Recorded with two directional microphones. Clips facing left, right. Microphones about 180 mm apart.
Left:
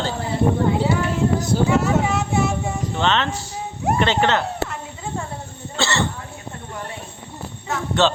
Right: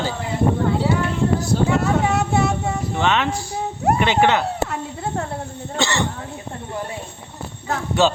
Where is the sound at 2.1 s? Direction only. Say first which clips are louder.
Right 2 dB; 65° right (ahead or behind).